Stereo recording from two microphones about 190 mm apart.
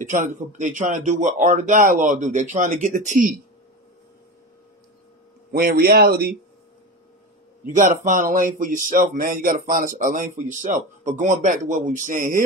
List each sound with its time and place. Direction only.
0.0 s speech: 40° right (ahead or behind)
5.5 s speech: 50° right (ahead or behind)
7.6 s speech: 40° right (ahead or behind)